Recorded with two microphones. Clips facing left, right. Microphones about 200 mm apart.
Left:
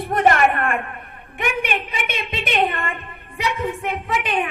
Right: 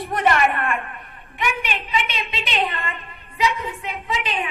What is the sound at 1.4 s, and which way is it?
A woman's voice, 55° left (ahead or behind).